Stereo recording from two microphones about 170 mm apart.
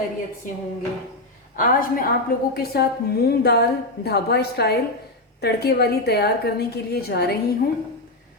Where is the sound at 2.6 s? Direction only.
65° left (ahead or behind).